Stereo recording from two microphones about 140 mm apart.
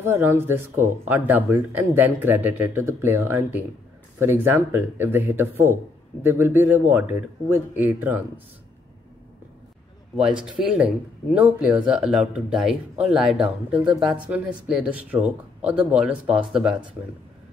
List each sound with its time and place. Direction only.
0.0 s speech: 20° right (ahead or behind)
10.1 s speech: 5° right (ahead or behind)